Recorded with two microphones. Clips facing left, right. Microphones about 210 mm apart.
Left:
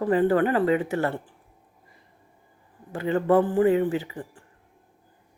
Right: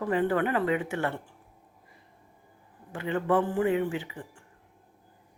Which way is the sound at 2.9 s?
40° left (ahead or behind).